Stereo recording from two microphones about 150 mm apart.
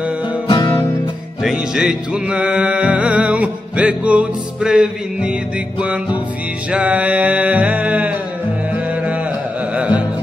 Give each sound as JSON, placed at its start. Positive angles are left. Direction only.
{"t": 0.5, "sound": "music", "side_deg": 30}
{"t": 1.4, "sound": "music", "side_deg": 0}
{"t": 6.7, "sound": "music", "side_deg": -10}